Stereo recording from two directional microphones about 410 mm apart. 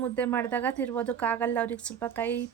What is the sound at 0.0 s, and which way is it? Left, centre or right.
A woman's voice, centre.